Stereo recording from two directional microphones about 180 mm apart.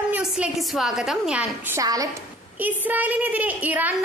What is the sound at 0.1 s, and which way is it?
A woman's voice, 5° right (ahead or behind).